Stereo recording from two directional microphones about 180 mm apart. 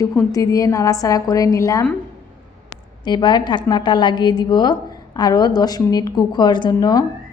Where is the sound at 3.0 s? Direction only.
25° left (ahead or behind).